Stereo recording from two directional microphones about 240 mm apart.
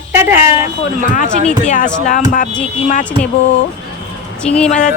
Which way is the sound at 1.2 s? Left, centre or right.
Right.